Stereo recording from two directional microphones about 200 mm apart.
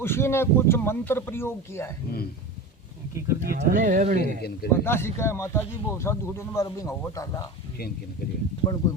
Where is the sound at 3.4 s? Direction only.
45° right (ahead or behind).